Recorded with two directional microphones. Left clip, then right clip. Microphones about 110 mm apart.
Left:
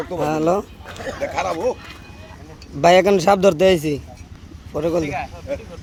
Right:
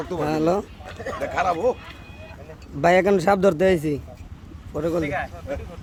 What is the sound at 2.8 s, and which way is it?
A man's voice, 15° right (ahead or behind).